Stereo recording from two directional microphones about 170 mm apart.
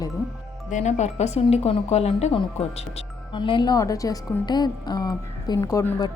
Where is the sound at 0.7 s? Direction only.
45° left (ahead or behind).